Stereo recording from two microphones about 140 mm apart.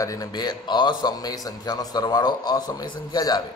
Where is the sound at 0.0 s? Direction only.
25° left (ahead or behind).